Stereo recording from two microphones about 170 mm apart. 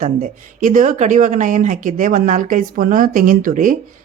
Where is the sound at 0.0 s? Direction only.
50° right (ahead or behind).